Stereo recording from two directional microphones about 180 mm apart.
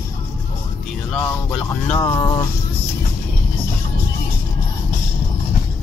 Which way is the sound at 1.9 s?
20° left (ahead or behind).